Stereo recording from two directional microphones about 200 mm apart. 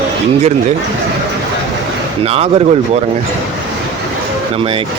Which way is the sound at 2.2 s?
30° right (ahead or behind).